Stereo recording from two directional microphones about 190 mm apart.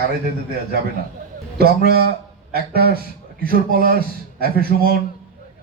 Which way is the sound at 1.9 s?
55° right (ahead or behind).